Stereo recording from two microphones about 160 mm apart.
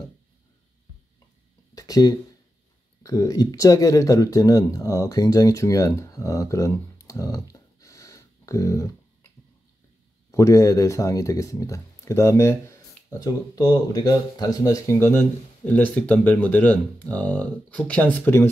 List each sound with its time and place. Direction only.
1.8 s a sound: 25° left (ahead or behind)
3.0 s speech: 20° left (ahead or behind)
10.3 s speech: 20° left (ahead or behind)